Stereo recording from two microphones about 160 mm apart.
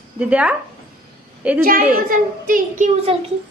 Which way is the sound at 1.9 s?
60° right (ahead or behind).